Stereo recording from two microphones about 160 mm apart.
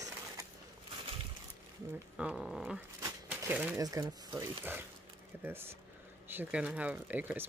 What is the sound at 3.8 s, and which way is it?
Speech, 25° right (ahead or behind).